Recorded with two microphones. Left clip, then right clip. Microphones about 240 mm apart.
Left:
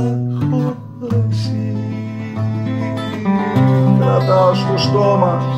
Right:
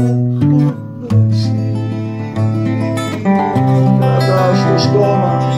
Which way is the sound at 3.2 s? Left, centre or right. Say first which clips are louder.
Right 3 dB; right.